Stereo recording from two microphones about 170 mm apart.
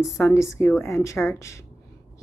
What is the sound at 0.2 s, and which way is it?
A woman's voice, 15° left (ahead or behind).